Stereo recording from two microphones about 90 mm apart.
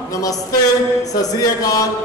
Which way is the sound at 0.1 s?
40° left (ahead or behind).